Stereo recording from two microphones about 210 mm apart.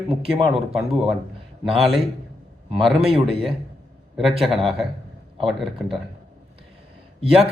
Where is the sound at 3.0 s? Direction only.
25° right (ahead or behind).